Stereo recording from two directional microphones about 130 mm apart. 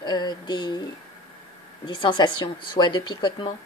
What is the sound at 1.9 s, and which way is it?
A woman's voice, 40° left (ahead or behind).